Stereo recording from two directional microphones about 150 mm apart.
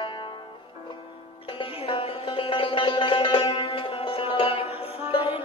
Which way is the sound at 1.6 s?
35° left (ahead or behind).